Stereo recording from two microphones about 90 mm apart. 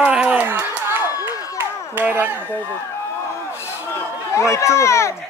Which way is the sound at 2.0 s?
20° right (ahead or behind).